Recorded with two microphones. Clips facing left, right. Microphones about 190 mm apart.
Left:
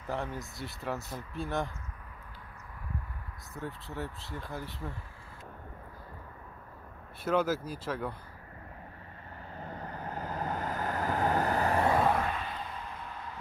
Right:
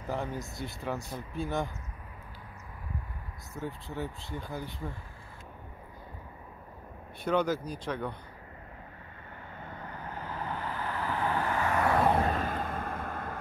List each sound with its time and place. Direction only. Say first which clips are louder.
0.1 s speech: right 1 dB; centre (ahead or behind)
3.5 s speech: right 2 dB; centre (ahead or behind)
7.2 s speech: right 1 dB; 5° left (ahead or behind)
9.6 s vehicle: left 3 dB; 35° left (ahead or behind)
12.2 s a sound: right 5 dB; 45° right (ahead or behind)